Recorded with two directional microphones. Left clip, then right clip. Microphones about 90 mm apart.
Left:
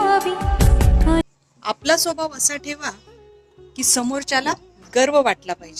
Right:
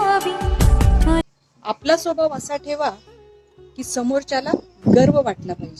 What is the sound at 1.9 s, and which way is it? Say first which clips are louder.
A woman's voice: right 2 dB; 20° right (ahead or behind).